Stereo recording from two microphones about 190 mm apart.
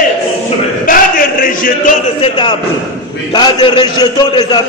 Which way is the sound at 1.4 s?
45° left (ahead or behind).